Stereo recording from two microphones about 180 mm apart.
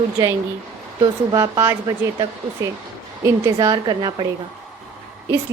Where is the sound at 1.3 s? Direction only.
20° right (ahead or behind).